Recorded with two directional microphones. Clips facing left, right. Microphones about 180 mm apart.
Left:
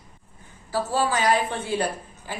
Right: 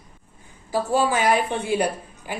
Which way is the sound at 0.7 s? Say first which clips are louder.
Right 3 dB; 15° right (ahead or behind).